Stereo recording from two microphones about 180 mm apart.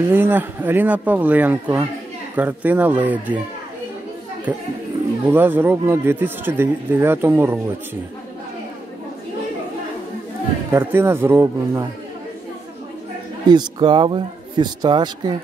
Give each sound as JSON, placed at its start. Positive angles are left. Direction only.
{"t": 0.1, "sound": "speech", "side_deg": -10}
{"t": 4.5, "sound": "speech", "side_deg": -10}
{"t": 10.7, "sound": "speech", "side_deg": -10}
{"t": 13.5, "sound": "speech", "side_deg": -25}